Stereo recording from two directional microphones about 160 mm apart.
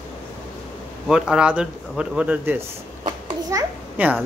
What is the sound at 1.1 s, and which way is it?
Speech, 5° right (ahead or behind).